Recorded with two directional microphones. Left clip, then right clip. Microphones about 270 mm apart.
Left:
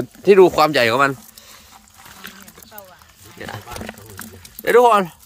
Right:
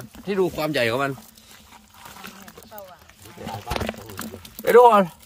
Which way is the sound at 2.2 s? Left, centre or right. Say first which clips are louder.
Left 6 dB; right.